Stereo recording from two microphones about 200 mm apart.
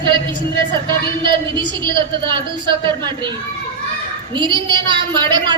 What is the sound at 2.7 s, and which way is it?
A woman's voice, 25° right (ahead or behind).